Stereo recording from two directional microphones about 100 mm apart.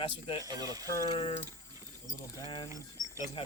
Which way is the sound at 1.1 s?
70° left (ahead or behind).